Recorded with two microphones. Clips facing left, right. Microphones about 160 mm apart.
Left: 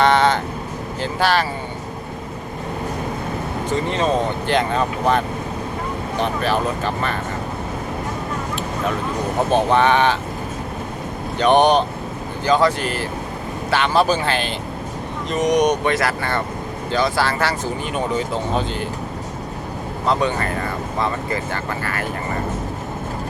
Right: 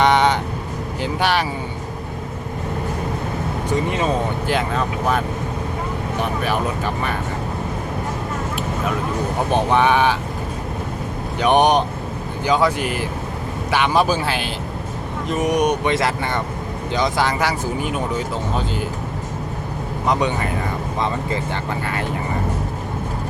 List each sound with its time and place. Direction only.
0.0 s vehicle: 15° right (ahead or behind)
1.0 s speech: 15° right (ahead or behind)
3.7 s speech: 10° right (ahead or behind)
9.5 s speech: 10° right (ahead or behind)
11.3 s speech: 10° right (ahead or behind)
15.8 s speech: 20° right (ahead or behind)
17.8 s speech: 5° right (ahead or behind)
20.1 s speech: 15° right (ahead or behind)